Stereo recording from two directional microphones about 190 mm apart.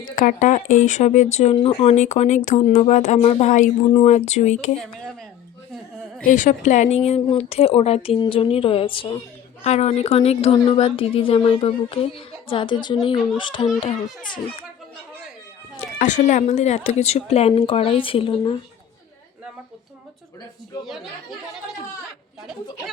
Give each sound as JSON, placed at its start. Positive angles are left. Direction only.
{"t": 0.2, "sound": "speech", "side_deg": 40}
{"t": 6.2, "sound": "a woman's voice", "side_deg": 45}
{"t": 15.8, "sound": "speech", "side_deg": 40}
{"t": 20.8, "sound": "speech", "side_deg": 0}